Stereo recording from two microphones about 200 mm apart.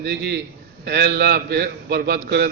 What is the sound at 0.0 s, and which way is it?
A man's voice, 55° right (ahead or behind).